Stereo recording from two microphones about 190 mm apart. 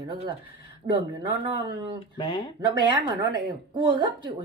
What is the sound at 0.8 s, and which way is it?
Speech, 40° right (ahead or behind).